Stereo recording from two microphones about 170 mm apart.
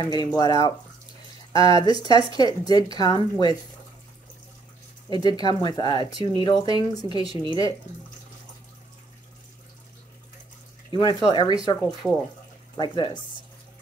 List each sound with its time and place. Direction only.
0.0 s speech: 25° left (ahead or behind)
5.1 s speech: 25° left (ahead or behind)
10.9 s speech: 25° left (ahead or behind)
12.0 s speech: centre (ahead or behind)
12.7 s speech: 25° left (ahead or behind)